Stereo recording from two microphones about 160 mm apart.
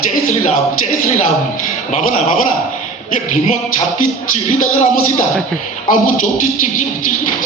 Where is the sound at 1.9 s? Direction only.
50° left (ahead or behind).